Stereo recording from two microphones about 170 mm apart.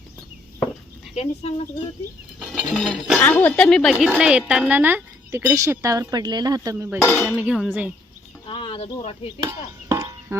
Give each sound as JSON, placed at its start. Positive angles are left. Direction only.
{"t": 1.1, "sound": "speech", "side_deg": 40}
{"t": 2.4, "sound": "music", "side_deg": 0}
{"t": 3.2, "sound": "a woman's voice", "side_deg": 10}
{"t": 7.2, "sound": "a woman's voice", "side_deg": -5}
{"t": 8.4, "sound": "speech", "side_deg": 30}
{"t": 9.4, "sound": "a sound", "side_deg": -20}